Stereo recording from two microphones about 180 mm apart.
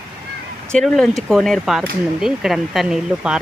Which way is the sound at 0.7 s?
Centre (ahead or behind).